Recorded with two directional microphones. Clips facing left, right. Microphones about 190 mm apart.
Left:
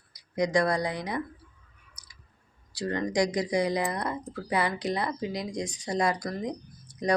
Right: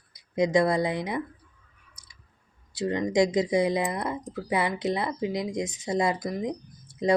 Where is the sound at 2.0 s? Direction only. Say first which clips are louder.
Even; 25° right (ahead or behind).